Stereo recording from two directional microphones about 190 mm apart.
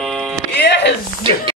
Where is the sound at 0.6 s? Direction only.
65° left (ahead or behind).